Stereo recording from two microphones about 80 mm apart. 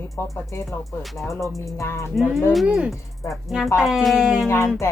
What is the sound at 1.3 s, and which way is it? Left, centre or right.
Speech, left.